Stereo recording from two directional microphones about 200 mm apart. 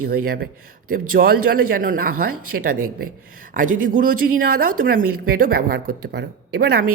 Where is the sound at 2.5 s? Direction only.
60° right (ahead or behind).